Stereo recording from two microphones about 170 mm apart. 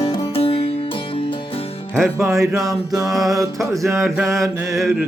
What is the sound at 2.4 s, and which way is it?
Music, 20° right (ahead or behind).